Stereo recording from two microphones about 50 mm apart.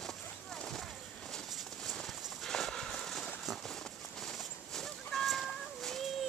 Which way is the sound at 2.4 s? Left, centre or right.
Centre.